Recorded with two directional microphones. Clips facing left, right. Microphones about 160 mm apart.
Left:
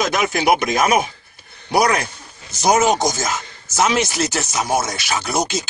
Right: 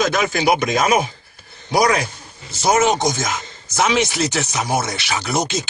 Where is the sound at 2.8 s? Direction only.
40° left (ahead or behind).